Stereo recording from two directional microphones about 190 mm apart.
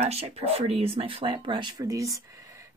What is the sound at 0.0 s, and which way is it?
Speech, 35° right (ahead or behind).